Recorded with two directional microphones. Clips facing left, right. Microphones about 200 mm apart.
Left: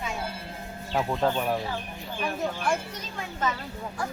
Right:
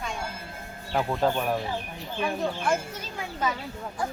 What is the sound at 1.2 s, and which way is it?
Speech, centre (ahead or behind).